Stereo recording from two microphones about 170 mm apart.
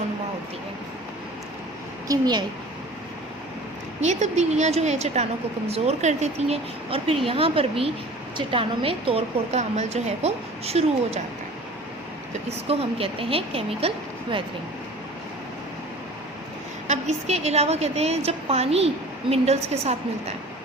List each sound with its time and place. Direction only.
2.0 s a child's voice: 25° right (ahead or behind)
4.0 s a woman's voice: 45° right (ahead or behind)
12.5 s a woman's voice: 35° right (ahead or behind)
16.8 s a woman's voice: 40° right (ahead or behind)